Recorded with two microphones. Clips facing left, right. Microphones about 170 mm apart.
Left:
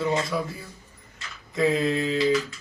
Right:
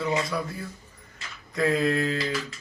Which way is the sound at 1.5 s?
Centre (ahead or behind).